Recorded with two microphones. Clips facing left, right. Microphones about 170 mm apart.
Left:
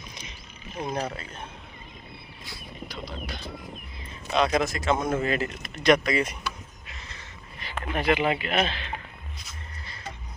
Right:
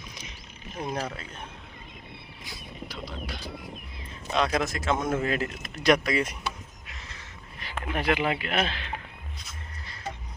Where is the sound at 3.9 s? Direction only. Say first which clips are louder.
Left 2 dB; centre (ahead or behind).